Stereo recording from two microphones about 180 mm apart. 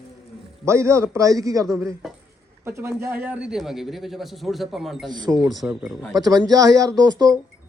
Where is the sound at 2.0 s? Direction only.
Centre (ahead or behind).